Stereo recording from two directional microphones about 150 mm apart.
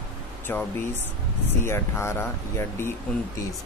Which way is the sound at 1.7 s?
15° left (ahead or behind).